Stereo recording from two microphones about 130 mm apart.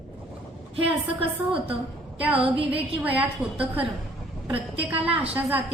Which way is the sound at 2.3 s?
45° right (ahead or behind).